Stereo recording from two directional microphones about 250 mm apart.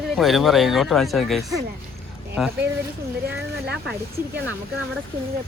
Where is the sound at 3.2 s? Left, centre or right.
Right.